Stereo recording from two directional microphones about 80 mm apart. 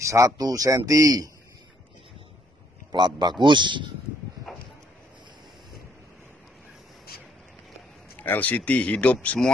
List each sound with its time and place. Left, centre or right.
0.0 s speech: right
2.9 s a man's voice: right
8.2 s speech: centre